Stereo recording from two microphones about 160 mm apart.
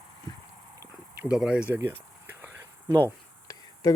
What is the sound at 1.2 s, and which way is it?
Speech, 5° right (ahead or behind).